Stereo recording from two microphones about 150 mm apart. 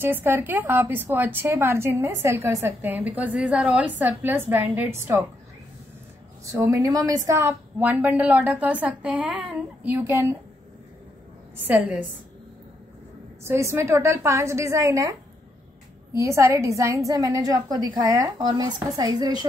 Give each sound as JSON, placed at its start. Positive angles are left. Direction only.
{"t": 0.0, "sound": "a woman's voice", "side_deg": -15}
{"t": 6.4, "sound": "a woman's voice", "side_deg": -20}
{"t": 11.6, "sound": "a woman's voice", "side_deg": -10}
{"t": 13.4, "sound": "a woman's voice", "side_deg": -15}